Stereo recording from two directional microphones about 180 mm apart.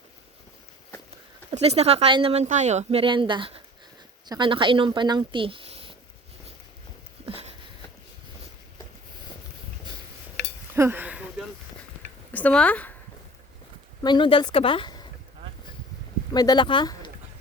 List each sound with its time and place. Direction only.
1.5 s speech: 35° right (ahead or behind)
7.3 s a sound: 35° right (ahead or behind)
10.8 s a sound: 10° right (ahead or behind)
12.3 s speech: 10° left (ahead or behind)
14.0 s speech: 25° left (ahead or behind)
16.3 s speech: 20° left (ahead or behind)